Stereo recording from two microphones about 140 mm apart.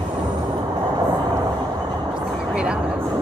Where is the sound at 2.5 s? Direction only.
10° right (ahead or behind).